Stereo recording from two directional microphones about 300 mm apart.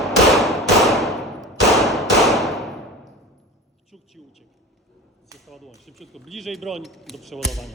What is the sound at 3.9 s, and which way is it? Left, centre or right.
Speech, centre.